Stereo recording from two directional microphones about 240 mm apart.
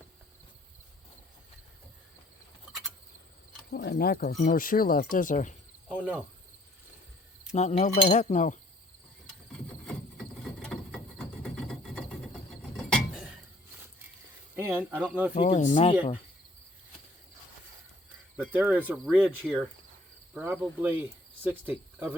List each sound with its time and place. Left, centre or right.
3.7 s speech: left
5.9 s speech: centre
7.5 s speech: left
9.8 s a sound: centre
12.7 s vehicle: centre
14.6 s speech: centre
15.4 s speech: left
18.3 s speech: centre